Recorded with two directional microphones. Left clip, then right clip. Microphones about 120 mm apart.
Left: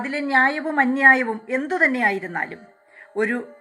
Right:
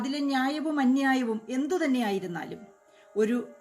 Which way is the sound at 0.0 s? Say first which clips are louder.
Left 10 dB; 50° right (ahead or behind).